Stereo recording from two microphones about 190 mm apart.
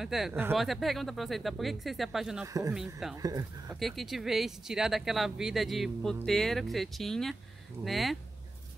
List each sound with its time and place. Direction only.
0.0 s speech: centre (ahead or behind)
0.6 s speech: centre (ahead or behind)
2.4 s speech: 15° right (ahead or behind)
3.8 s speech: centre (ahead or behind)